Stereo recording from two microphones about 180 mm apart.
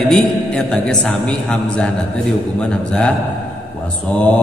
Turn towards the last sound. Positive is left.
turn(degrees=10)  # may be behind; listen again after turning